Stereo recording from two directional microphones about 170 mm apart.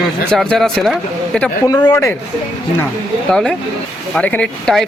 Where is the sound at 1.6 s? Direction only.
20° left (ahead or behind).